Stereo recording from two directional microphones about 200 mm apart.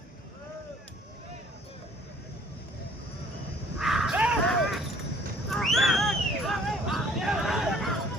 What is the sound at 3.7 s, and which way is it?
Bow-wow, centre (ahead or behind).